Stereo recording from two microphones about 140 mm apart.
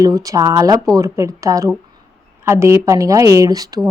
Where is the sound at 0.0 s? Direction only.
25° right (ahead or behind).